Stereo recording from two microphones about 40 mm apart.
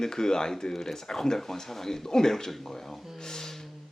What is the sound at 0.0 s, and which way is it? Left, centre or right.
Speech, centre.